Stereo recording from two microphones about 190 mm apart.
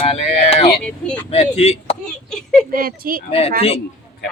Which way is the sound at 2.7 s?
50° right (ahead or behind).